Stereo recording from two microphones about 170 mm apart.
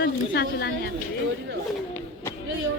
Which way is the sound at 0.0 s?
70° left (ahead or behind).